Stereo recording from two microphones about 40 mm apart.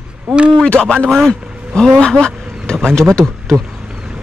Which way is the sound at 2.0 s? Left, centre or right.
Left.